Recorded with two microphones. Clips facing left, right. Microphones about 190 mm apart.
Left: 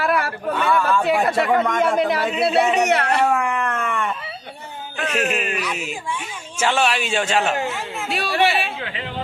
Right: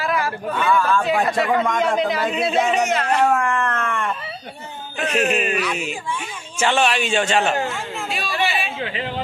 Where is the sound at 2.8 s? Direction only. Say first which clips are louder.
Left 1 dB; 65° left (ahead or behind).